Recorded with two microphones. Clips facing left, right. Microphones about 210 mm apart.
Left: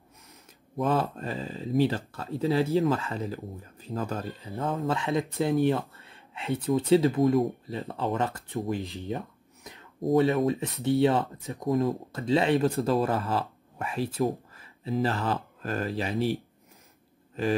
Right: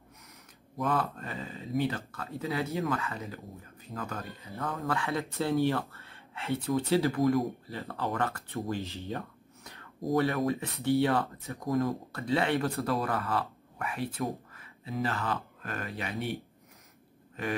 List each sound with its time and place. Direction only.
0.7 s speech: 30° left (ahead or behind)